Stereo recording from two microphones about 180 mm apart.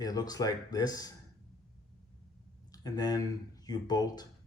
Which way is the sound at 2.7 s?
20° left (ahead or behind).